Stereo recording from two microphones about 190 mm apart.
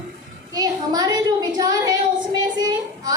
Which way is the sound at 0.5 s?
20° right (ahead or behind).